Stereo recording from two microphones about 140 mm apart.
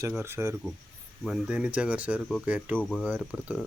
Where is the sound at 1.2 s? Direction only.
5° right (ahead or behind).